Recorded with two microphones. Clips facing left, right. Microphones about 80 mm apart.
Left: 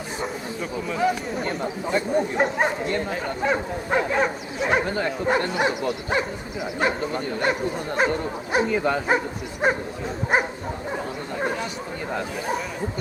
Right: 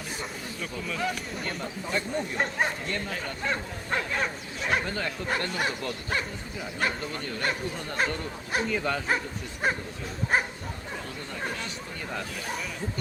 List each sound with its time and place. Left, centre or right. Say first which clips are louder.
0.9 s speech: left 9 dB; centre
3.5 s bow-wow: left 7 dB; centre
4.6 s speech: left 6 dB; left
5.5 s bow-wow: left 7 dB; centre
7.0 s speech: left 7 dB; left
9.6 s speech: left 6 dB; centre
10.3 s bow-wow: left 4 dB; centre
10.9 s bow-wow: left 8 dB; left